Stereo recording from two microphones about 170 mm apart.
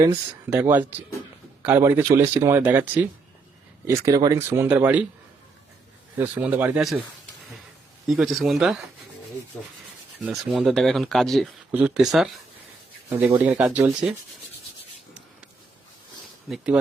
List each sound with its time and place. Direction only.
0.5 s speech: 10° right (ahead or behind)
6.1 s speech: 10° right (ahead or behind)
8.0 s speech: centre (ahead or behind)
10.2 s speech: centre (ahead or behind)